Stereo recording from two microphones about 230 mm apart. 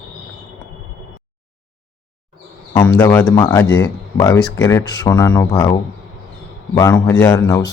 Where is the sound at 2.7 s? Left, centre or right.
Centre.